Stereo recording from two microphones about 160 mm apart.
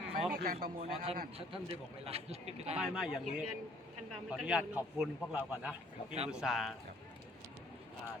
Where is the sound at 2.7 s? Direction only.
5° right (ahead or behind).